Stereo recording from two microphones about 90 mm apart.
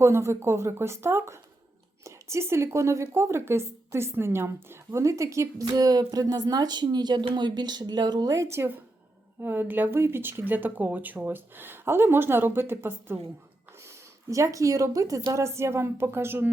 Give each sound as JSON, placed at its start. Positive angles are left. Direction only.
{"t": 0.0, "sound": "speech", "side_deg": -30}